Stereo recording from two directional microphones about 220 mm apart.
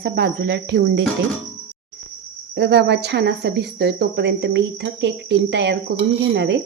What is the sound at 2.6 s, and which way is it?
Speech, 50° right (ahead or behind).